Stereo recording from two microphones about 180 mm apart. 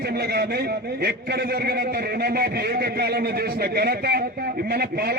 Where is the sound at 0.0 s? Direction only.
60° right (ahead or behind).